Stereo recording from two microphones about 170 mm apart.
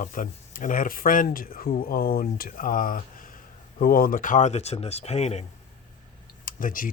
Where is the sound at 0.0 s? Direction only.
50° left (ahead or behind).